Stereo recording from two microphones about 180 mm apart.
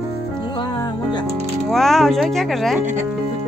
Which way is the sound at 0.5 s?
25° left (ahead or behind).